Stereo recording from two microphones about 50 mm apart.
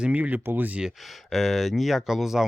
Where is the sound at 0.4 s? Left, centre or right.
Right.